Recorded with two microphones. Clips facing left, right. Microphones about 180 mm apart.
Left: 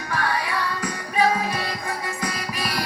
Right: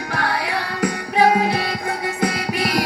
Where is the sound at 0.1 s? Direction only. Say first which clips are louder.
Right 2 dB; 70° right (ahead or behind).